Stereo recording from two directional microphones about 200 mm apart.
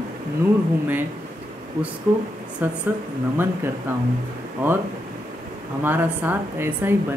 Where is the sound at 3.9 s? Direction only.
10° right (ahead or behind).